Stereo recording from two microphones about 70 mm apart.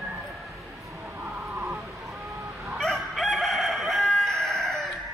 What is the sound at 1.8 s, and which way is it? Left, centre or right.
Chicken, centre.